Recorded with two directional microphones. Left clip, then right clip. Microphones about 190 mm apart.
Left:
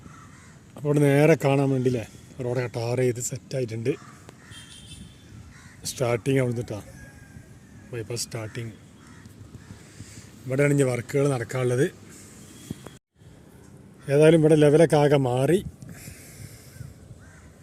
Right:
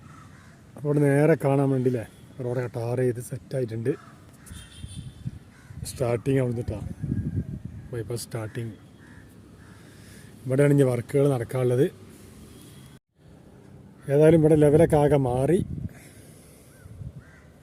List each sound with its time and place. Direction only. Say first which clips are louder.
0.7 s speech: left 1 dB; 5° left (ahead or behind)
5.8 s speech: left 1 dB; centre (ahead or behind)
7.9 s speech: left 1 dB; 20° right (ahead or behind)
10.5 s a man's voice: right 1 dB; 25° right (ahead or behind)
14.1 s speech: left 1 dB; 5° right (ahead or behind)